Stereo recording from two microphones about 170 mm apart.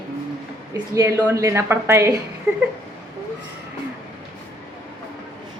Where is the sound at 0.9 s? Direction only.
15° right (ahead or behind).